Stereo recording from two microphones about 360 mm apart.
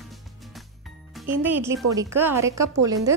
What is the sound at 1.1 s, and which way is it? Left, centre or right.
A child's voice, centre.